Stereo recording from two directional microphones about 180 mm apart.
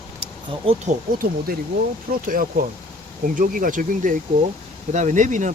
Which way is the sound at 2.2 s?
50° right (ahead or behind).